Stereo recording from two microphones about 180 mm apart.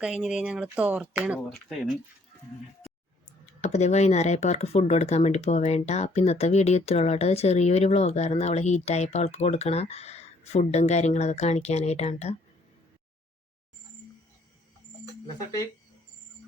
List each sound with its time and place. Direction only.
0.2 s speech: 5° right (ahead or behind)
3.6 s speech: 40° left (ahead or behind)